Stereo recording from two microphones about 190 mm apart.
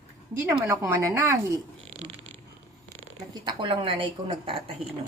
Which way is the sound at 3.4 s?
25° right (ahead or behind).